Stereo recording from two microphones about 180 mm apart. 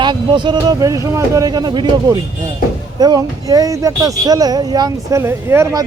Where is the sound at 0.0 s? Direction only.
25° right (ahead or behind).